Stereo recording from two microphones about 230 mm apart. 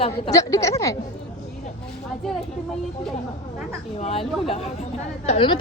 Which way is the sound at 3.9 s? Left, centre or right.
Left.